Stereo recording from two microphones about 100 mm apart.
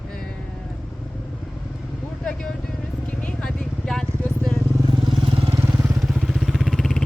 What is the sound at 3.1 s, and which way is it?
Vehicle, 15° left (ahead or behind).